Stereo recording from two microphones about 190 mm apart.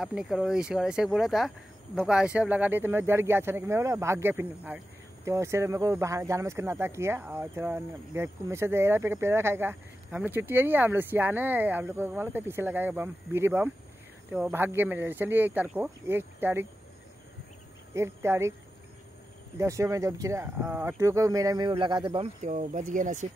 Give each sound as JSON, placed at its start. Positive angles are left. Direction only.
{"t": 0.0, "sound": "speech", "side_deg": 0}
{"t": 17.9, "sound": "speech", "side_deg": -15}
{"t": 19.6, "sound": "speech", "side_deg": -15}